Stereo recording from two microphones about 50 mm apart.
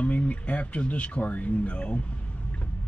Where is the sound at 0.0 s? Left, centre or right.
Left.